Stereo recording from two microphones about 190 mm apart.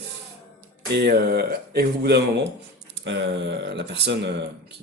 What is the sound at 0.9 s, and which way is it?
Speech, 60° right (ahead or behind).